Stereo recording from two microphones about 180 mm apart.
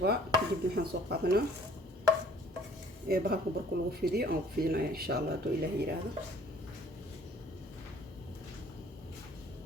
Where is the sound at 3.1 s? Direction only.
60° right (ahead or behind).